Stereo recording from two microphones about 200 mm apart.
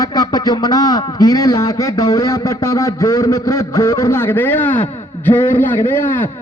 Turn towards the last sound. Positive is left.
turn(degrees=10)  # may be behind; listen again after turning